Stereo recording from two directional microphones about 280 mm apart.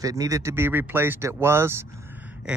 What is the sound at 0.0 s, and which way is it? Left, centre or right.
Speech, centre.